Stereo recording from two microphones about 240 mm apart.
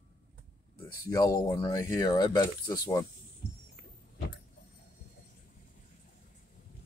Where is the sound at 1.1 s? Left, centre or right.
Centre.